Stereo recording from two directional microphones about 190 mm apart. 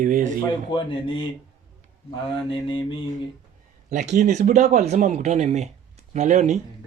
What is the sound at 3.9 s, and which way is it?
Speech, 40° right (ahead or behind).